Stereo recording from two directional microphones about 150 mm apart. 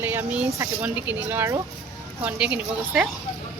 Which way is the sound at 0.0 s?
15° right (ahead or behind).